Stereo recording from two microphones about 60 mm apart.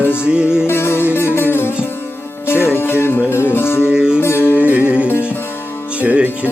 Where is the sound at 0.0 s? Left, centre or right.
Left.